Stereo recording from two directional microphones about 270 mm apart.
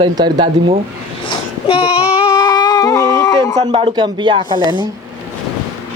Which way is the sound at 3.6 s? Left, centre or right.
Right.